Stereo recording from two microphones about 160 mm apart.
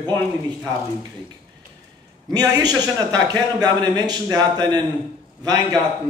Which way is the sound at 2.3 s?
25° right (ahead or behind).